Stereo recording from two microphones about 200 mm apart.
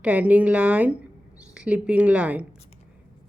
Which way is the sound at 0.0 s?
5° right (ahead or behind).